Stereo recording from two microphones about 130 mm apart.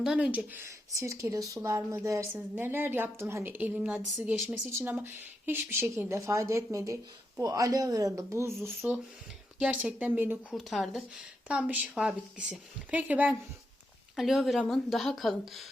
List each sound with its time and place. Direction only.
0.0 s a woman's voice: 5° right (ahead or behind)
0.9 s a woman's voice: 25° right (ahead or behind)
10.5 s a woman's voice: centre (ahead or behind)
14.2 s speech: centre (ahead or behind)